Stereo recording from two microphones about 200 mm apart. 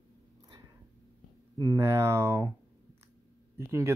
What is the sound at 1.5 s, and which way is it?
Speech, 15° right (ahead or behind).